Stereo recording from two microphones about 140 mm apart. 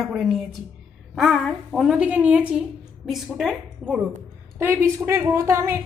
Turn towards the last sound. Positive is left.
turn(degrees=-20)  # may be behind; listen again after turning